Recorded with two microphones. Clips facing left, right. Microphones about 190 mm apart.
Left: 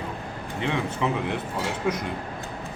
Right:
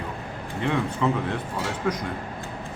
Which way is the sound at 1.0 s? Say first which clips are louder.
Right 2 dB; 15° left (ahead or behind).